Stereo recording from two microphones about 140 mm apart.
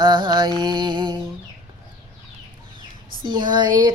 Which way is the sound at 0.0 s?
35° right (ahead or behind).